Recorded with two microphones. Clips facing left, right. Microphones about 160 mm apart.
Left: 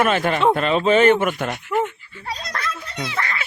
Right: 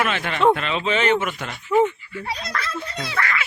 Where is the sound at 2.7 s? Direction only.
30° right (ahead or behind).